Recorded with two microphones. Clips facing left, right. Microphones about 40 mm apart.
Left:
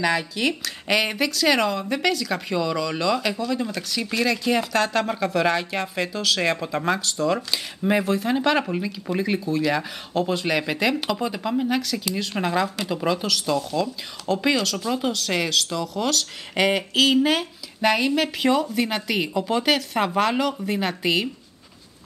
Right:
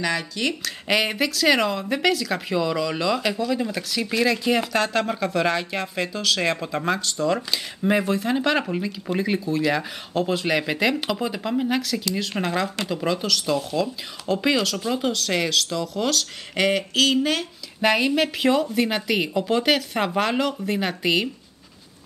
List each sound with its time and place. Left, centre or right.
0.0 s speech: centre
12.0 s speech: centre
17.7 s speech: centre